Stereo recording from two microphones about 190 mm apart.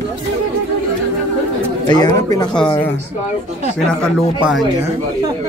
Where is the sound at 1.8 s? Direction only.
20° left (ahead or behind).